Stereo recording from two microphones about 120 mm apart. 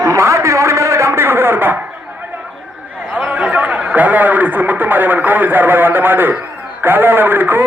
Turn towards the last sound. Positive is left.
turn(degrees=-15)  # may be behind; listen again after turning